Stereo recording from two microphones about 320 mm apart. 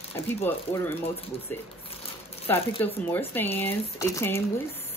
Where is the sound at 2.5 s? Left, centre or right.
Centre.